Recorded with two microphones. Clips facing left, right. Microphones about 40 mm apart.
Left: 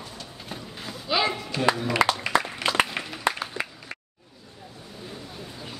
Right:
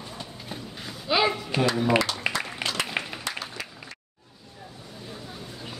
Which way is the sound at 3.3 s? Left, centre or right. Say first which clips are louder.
Left 7 dB; left.